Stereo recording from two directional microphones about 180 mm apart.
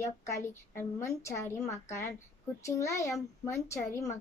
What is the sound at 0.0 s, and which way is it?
Speech, 15° left (ahead or behind).